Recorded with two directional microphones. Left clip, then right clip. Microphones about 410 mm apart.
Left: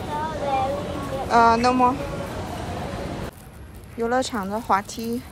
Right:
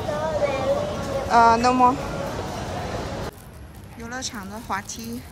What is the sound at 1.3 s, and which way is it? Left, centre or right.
Speech, centre.